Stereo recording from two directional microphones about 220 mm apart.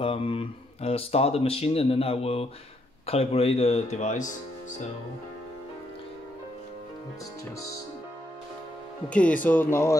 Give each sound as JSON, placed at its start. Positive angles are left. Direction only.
{"t": 0.0, "sound": "speech", "side_deg": 25}
{"t": 9.1, "sound": "speech", "side_deg": 5}